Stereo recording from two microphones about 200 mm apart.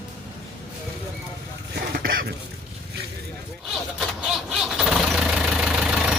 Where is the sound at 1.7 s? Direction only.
50° right (ahead or behind).